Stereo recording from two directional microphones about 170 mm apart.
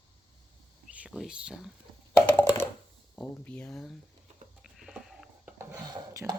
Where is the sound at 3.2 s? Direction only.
10° left (ahead or behind).